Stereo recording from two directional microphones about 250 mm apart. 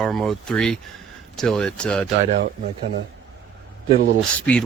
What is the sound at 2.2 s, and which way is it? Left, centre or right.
Speech, right.